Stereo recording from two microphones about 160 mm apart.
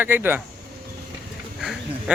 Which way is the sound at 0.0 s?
15° right (ahead or behind).